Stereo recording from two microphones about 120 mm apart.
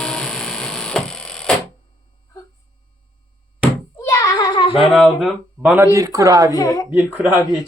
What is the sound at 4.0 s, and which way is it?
Child singing, 25° left (ahead or behind).